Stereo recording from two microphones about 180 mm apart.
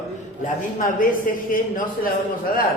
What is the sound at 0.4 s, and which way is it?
A man's voice, 45° left (ahead or behind).